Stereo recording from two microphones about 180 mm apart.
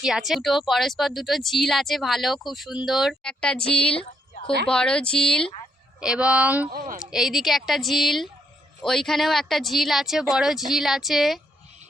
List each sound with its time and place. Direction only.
0.0 s speech: centre (ahead or behind)
6.7 s speech: 45° right (ahead or behind)
7.0 s speech: centre (ahead or behind)